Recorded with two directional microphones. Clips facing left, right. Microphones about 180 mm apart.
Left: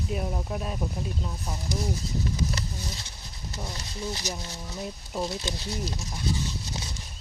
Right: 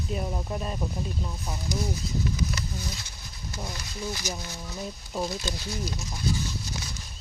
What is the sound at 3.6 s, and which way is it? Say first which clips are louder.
Speech: even; 30° left (ahead or behind).